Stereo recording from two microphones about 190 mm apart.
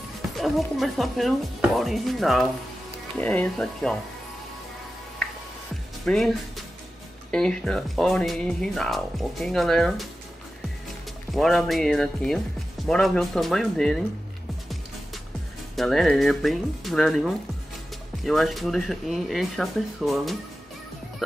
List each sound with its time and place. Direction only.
0.4 s speech: centre (ahead or behind)
6.0 s speech: centre (ahead or behind)
11.3 s speech: centre (ahead or behind)
15.7 s speech: centre (ahead or behind)